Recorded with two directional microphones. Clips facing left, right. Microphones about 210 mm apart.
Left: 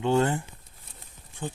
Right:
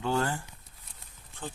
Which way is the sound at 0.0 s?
20° left (ahead or behind).